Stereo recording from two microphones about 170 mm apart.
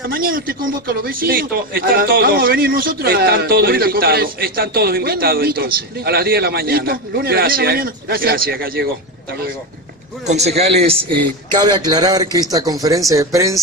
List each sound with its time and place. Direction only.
0.1 s a man's voice: 60° right (ahead or behind)
10.2 s a man's voice: 40° right (ahead or behind); by 13.6 s 20° right (ahead or behind)